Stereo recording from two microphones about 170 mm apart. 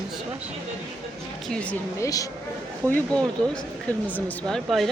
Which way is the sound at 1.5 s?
10° left (ahead or behind).